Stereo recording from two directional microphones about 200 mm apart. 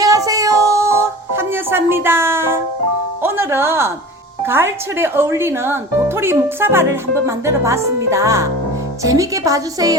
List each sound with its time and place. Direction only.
0.0 s music: 15° right (ahead or behind)
3.2 s speech: 10° right (ahead or behind)